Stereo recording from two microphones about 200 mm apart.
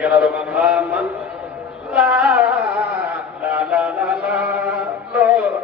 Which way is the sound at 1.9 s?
5° right (ahead or behind).